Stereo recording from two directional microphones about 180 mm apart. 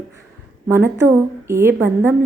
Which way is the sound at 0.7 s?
10° right (ahead or behind).